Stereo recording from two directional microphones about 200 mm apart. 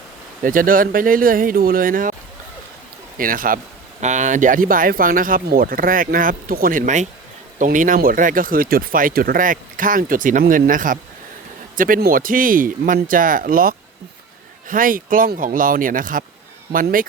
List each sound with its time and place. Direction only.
0.4 s speech: 45° right (ahead or behind)
3.2 s speech: 45° right (ahead or behind)